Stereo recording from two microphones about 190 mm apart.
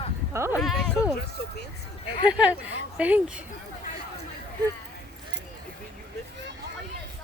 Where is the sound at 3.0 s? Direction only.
5° right (ahead or behind).